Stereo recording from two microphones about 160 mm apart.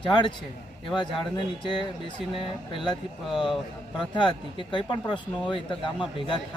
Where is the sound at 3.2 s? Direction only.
Centre (ahead or behind).